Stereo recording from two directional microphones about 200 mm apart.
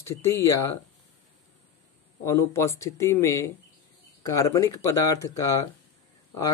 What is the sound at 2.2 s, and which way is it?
Speech, 15° left (ahead or behind).